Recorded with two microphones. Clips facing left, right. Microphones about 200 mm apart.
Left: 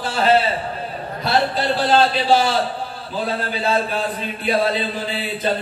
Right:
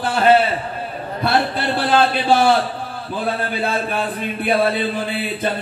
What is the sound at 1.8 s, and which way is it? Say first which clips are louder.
Speech: even; 55° right (ahead or behind).